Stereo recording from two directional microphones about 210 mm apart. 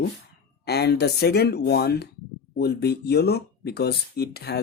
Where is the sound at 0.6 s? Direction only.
50° left (ahead or behind).